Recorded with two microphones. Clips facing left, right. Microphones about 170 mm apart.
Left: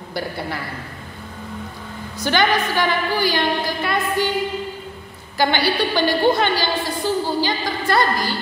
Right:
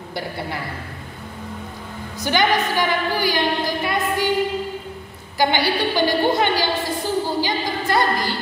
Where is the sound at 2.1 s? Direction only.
15° right (ahead or behind).